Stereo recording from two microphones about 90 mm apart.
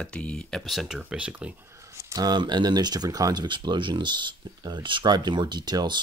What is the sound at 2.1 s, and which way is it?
Speech, 55° right (ahead or behind).